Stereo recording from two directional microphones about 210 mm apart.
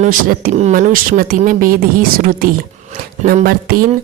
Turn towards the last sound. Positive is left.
turn(degrees=-45)  # may be behind; listen again after turning